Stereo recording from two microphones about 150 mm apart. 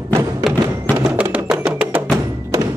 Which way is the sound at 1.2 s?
10° right (ahead or behind).